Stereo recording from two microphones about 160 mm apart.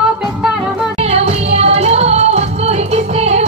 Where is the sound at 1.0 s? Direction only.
40° right (ahead or behind).